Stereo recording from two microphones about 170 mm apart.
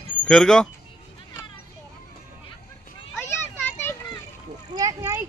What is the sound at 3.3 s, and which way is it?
Children playing, 15° left (ahead or behind).